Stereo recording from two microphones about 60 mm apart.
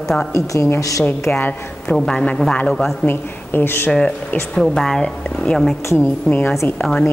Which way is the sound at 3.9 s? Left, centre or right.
Centre.